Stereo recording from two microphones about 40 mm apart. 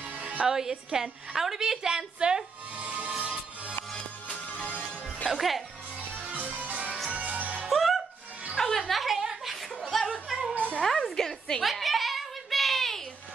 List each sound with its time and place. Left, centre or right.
0.2 s music: right
0.5 s a woman's voice: centre
2.8 s music: right
4.6 s music: left
5.3 s speech: centre
6.1 s music: right
7.7 s music: centre
8.5 s music: centre
9.0 s chuckle: centre
10.5 s cat: right
10.8 s music: centre
11.1 s a woman's voice: centre
11.6 s a sound: centre